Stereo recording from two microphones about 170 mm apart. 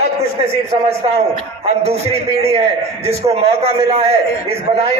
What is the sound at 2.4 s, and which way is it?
A man's voice, 35° right (ahead or behind).